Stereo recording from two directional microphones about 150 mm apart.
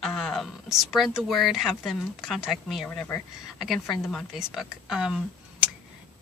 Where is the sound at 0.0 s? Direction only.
Centre (ahead or behind).